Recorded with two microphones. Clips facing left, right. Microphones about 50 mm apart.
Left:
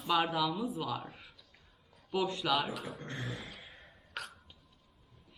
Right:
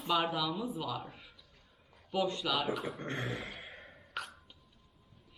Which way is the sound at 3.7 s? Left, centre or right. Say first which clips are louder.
Right 4 dB; right.